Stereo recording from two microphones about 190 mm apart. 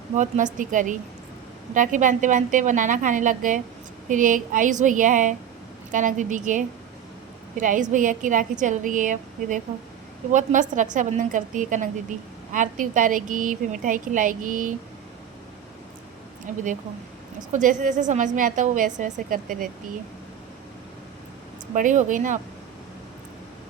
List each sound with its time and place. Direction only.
0.2 s a woman's voice: 40° right (ahead or behind)
16.5 s a woman's voice: 40° right (ahead or behind)
21.8 s a woman's voice: 45° right (ahead or behind)